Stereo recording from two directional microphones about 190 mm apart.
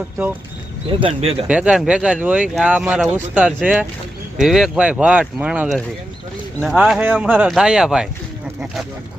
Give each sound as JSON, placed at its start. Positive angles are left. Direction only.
{"t": 0.9, "sound": "speech", "side_deg": -30}
{"t": 1.5, "sound": "speech", "side_deg": -5}
{"t": 6.7, "sound": "speech", "side_deg": -5}